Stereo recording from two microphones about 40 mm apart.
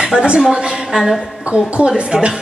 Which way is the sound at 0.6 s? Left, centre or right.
Centre.